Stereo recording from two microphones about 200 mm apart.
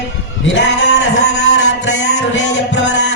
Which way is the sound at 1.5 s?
70° left (ahead or behind).